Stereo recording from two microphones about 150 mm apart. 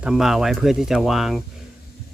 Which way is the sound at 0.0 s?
5° right (ahead or behind).